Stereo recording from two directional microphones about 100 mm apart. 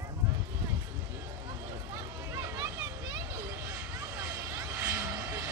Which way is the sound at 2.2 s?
35° right (ahead or behind).